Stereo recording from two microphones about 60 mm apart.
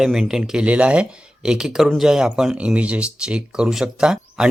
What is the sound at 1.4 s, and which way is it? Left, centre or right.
Speech, centre.